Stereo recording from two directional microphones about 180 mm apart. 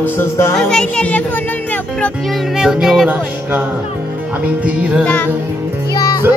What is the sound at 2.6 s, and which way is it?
Music, 5° right (ahead or behind).